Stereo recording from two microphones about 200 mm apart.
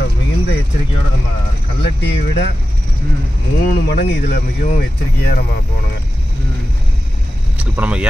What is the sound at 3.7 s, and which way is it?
Speech, 55° left (ahead or behind).